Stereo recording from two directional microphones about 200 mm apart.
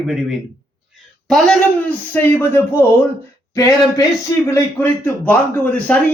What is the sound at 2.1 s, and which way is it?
A man's voice, 10° left (ahead or behind).